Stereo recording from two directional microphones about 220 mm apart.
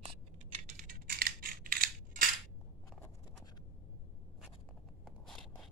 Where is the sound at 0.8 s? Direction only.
40° right (ahead or behind).